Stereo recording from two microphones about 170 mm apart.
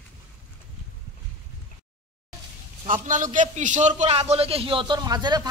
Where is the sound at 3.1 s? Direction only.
50° right (ahead or behind).